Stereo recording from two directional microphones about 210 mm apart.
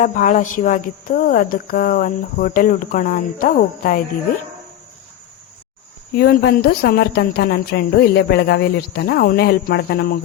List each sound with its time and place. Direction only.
0.0 s speech: 40° left (ahead or behind)
6.1 s a woman's voice: 50° left (ahead or behind)